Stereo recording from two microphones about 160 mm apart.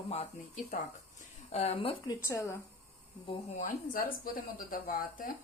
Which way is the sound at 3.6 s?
60° left (ahead or behind).